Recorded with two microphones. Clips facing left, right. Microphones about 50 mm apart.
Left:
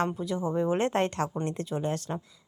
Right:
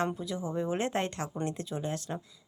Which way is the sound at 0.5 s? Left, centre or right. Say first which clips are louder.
Left 5 dB; centre.